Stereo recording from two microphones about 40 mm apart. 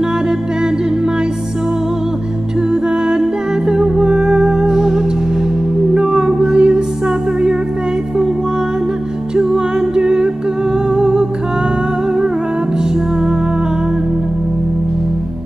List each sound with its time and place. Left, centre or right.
2.7 s music: centre
9.3 s music: centre